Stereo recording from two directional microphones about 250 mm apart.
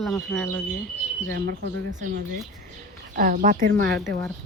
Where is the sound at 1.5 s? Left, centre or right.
Right.